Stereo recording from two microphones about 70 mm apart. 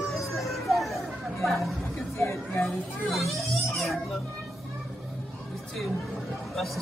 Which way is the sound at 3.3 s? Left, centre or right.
Centre.